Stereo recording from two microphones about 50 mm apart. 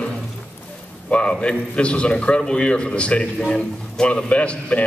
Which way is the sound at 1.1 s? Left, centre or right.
Left.